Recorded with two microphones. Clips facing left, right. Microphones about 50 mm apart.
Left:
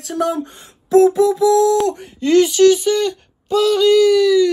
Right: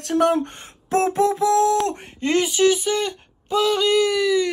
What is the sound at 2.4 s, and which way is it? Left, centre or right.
Speech, centre.